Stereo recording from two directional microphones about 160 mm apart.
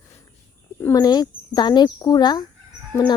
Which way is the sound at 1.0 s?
25° left (ahead or behind).